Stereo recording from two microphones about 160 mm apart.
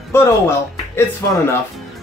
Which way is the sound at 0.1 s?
15° left (ahead or behind).